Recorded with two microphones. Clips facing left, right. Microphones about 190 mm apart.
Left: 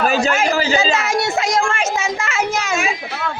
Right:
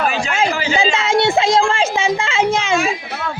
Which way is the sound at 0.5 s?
40° left (ahead or behind).